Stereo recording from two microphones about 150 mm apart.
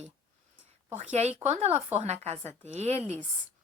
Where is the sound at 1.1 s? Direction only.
45° right (ahead or behind).